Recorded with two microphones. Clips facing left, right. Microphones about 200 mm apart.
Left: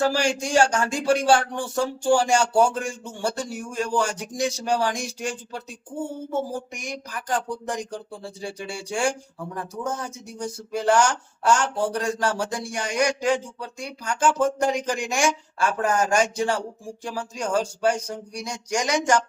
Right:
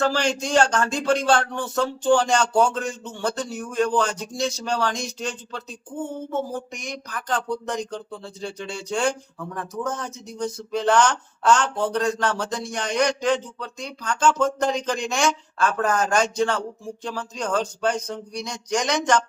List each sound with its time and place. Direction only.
0.0 s speech: 10° left (ahead or behind)
9.4 s speech: 30° left (ahead or behind)
9.9 s speech: 10° left (ahead or behind)